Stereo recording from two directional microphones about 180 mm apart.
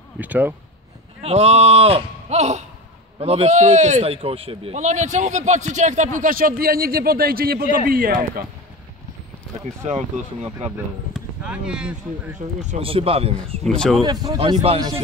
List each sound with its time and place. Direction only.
0.2 s speech: 10° right (ahead or behind)
1.2 s speech: 35° right (ahead or behind); by 8.5 s 55° right (ahead or behind)
9.8 s speech: 40° right (ahead or behind)
11.1 s speech: 5° right (ahead or behind)
12.6 s speech: 35° right (ahead or behind)
13.7 s speech: centre (ahead or behind)
14.0 s speech: 20° right (ahead or behind)